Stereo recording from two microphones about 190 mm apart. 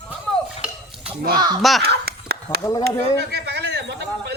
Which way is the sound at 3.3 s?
60° right (ahead or behind).